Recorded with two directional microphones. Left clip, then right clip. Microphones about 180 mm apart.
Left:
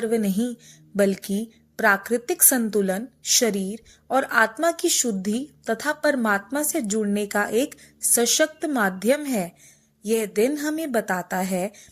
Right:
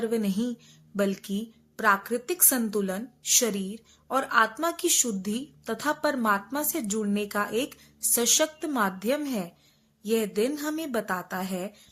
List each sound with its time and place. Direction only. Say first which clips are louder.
0.0 s a woman's voice: left 4 dB; 20° left (ahead or behind)